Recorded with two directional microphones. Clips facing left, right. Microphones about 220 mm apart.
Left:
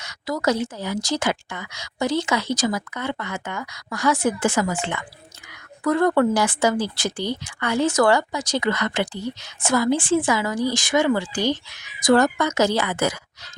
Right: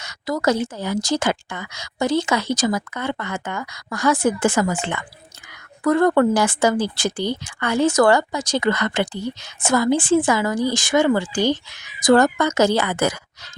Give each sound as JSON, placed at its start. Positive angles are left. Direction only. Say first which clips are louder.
{"t": 0.1, "sound": "a woman's voice", "louder": "right 2 dB", "side_deg": -50}